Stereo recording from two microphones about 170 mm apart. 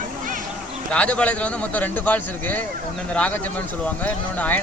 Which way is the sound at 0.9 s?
5° left (ahead or behind).